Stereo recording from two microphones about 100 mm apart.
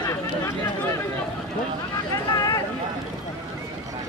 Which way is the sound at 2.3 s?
40° left (ahead or behind).